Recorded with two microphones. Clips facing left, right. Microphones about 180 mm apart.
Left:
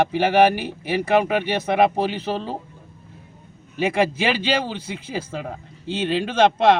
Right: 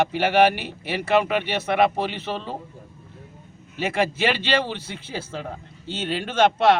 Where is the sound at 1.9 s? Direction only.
10° left (ahead or behind).